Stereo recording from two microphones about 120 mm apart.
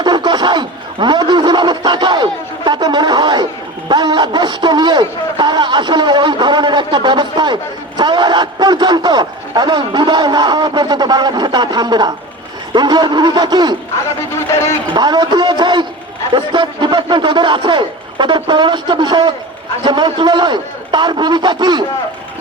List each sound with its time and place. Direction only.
0.0 s snicker: 35° right (ahead or behind)
3.8 s a man's voice: 35° right (ahead or behind)
14.3 s speech: 20° left (ahead or behind)
14.9 s a sound: 35° right (ahead or behind)
16.3 s a man's voice: 40° right (ahead or behind)